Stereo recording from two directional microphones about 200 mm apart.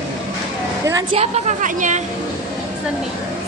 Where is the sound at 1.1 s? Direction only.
35° right (ahead or behind).